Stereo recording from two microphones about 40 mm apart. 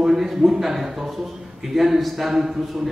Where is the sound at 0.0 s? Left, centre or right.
Centre.